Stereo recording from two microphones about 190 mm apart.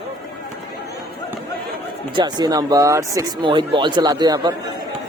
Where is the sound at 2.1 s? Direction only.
20° right (ahead or behind).